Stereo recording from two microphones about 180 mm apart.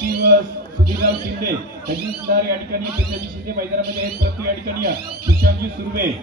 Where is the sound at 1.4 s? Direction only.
55° right (ahead or behind).